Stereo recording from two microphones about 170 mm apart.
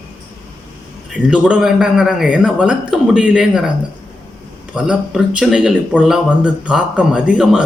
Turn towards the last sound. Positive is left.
turn(degrees=-5)  # may be behind; listen again after turning